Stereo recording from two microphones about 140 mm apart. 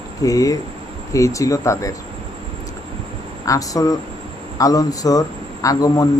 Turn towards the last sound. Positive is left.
turn(degrees=25)  # may be behind; listen again after turning